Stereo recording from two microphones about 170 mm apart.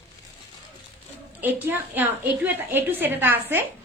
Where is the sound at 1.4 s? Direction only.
10° right (ahead or behind).